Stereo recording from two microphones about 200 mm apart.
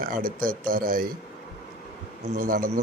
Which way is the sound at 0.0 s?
45° right (ahead or behind).